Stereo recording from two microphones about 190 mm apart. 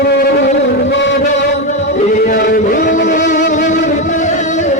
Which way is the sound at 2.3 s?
50° left (ahead or behind).